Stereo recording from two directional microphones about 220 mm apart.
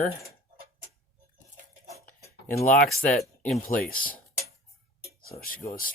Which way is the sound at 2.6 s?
35° left (ahead or behind).